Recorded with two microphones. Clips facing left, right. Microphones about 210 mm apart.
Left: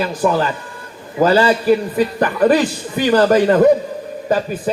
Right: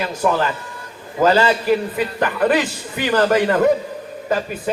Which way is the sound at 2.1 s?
35° left (ahead or behind).